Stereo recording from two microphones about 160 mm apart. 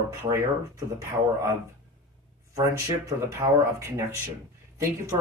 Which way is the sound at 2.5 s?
20° right (ahead or behind).